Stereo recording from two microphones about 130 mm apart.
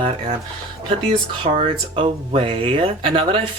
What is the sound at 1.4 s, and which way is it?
Speech, 45° right (ahead or behind).